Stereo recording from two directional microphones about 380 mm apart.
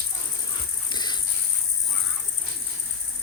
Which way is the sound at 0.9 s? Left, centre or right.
Centre.